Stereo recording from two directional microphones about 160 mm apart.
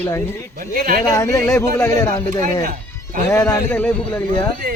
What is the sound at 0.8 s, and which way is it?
Speech, 60° right (ahead or behind).